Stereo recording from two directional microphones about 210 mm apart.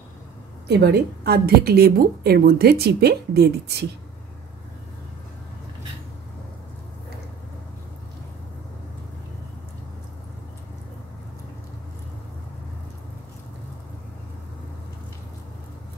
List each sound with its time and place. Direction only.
0.7 s a woman's voice: 50° right (ahead or behind)